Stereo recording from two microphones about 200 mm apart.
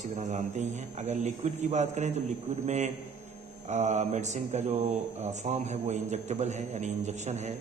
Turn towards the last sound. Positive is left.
turn(degrees=-35)  # may be behind; listen again after turning